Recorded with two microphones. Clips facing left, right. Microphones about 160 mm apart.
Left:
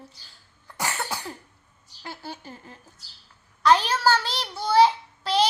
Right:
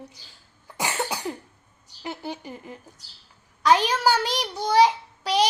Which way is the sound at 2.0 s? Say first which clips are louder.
Right 5 dB; 20° right (ahead or behind).